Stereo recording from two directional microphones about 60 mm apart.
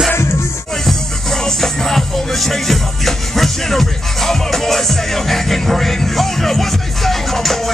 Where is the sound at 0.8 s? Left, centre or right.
Centre.